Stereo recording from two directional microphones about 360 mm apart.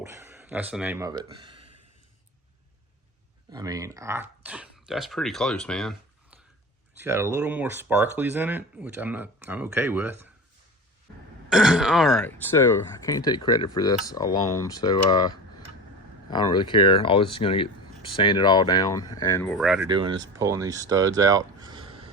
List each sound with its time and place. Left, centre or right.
0.0 s speech: centre
3.5 s speech: centre
7.0 s speech: centre
11.4 s speech: centre
19.9 s speech: centre